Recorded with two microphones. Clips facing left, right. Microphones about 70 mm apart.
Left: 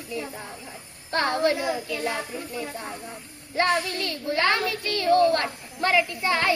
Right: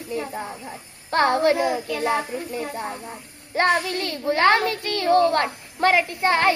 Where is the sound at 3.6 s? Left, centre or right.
Right.